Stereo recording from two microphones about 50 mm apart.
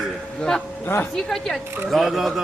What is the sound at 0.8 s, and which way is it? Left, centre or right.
Speech, left.